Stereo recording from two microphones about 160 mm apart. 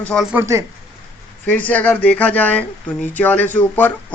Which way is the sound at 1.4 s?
10° left (ahead or behind).